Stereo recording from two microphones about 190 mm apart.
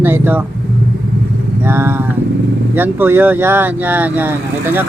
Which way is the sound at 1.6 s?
10° right (ahead or behind).